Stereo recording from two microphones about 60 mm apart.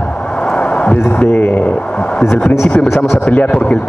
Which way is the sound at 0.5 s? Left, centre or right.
Centre.